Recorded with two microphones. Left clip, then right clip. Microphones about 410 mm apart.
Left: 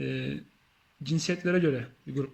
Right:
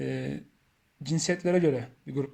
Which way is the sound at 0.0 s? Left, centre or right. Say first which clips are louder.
Right 1 dB; centre.